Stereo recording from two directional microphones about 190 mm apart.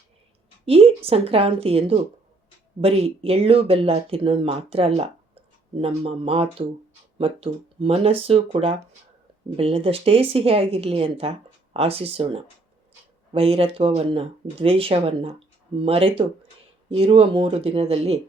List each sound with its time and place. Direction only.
0.6 s speech: 30° right (ahead or behind)